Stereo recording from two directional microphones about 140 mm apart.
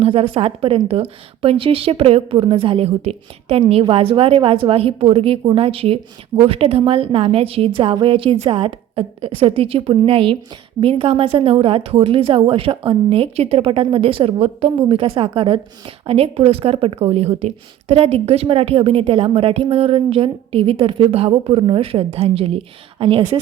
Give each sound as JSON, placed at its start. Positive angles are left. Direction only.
{"t": 0.0, "sound": "a woman's voice", "side_deg": -45}